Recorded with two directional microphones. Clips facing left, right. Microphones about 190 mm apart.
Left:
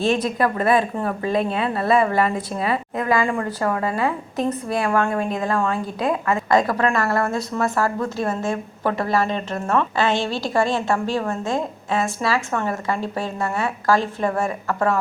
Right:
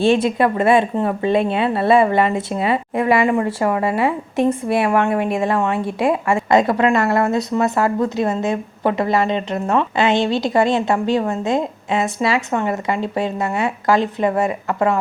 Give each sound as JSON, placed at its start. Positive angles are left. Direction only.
{"t": 0.0, "sound": "a woman's voice", "side_deg": -30}